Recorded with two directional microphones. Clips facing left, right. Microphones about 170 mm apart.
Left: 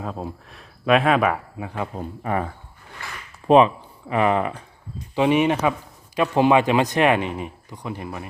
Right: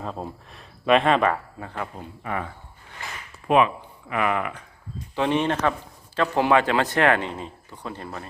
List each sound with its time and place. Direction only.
0.0 s speech: 5° left (ahead or behind)
2.0 s speech: 35° left (ahead or behind)
5.1 s speech: 10° left (ahead or behind)